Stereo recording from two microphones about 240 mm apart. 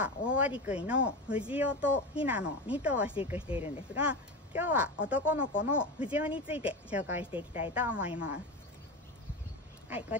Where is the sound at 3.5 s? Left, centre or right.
Left.